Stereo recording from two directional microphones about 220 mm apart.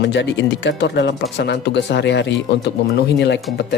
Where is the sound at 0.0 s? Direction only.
55° left (ahead or behind).